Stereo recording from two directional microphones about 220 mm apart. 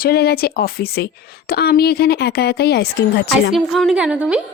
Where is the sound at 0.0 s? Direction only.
45° left (ahead or behind).